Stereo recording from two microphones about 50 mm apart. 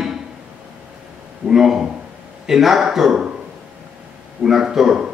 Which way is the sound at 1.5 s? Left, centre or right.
Centre.